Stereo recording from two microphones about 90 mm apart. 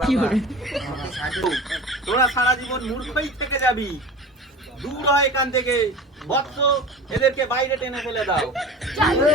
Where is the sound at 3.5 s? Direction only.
30° left (ahead or behind).